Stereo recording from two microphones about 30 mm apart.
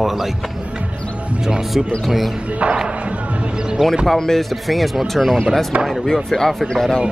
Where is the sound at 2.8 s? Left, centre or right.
Right.